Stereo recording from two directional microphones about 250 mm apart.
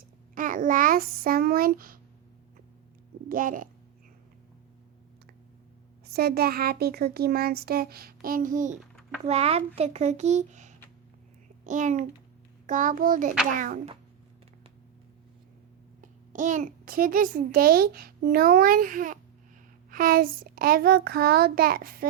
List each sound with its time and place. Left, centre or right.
0.3 s a child's voice: right
3.2 s a child's voice: right
6.1 s a child's voice: right
16.0 s a child's voice: right